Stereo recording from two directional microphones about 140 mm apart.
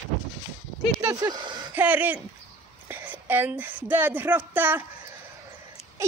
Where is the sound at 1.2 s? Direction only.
30° right (ahead or behind).